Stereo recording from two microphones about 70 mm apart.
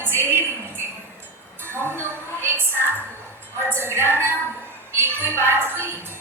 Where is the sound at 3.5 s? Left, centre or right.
Right.